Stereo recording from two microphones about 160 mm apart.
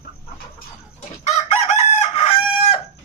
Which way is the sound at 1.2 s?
45° left (ahead or behind).